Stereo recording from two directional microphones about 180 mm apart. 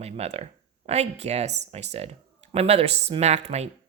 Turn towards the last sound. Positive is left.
turn(degrees=-35)  # may be behind; listen again after turning